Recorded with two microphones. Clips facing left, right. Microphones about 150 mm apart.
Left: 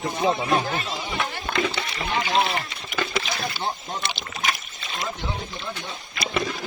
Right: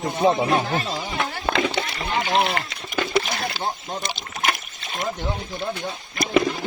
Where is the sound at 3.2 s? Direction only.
60° right (ahead or behind).